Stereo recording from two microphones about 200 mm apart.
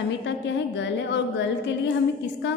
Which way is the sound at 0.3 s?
60° left (ahead or behind).